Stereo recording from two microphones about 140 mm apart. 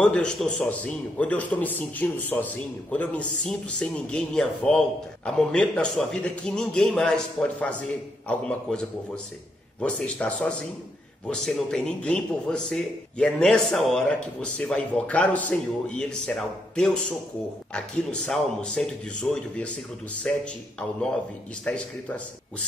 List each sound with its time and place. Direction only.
0.0 s a man's voice: 5° left (ahead or behind)
21.6 s a man's voice: 10° left (ahead or behind)